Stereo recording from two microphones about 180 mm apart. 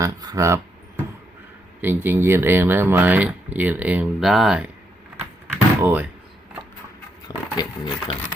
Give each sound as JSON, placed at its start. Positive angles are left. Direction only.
{"t": 0.0, "sound": "speech", "side_deg": -20}
{"t": 1.8, "sound": "speech", "side_deg": -10}
{"t": 5.1, "sound": "door", "side_deg": -10}
{"t": 7.3, "sound": "speech", "side_deg": 20}